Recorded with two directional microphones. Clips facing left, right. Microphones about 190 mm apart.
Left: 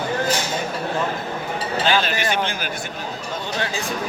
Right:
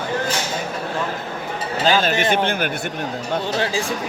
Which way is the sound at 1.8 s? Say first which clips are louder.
Right 4 dB; 45° right (ahead or behind).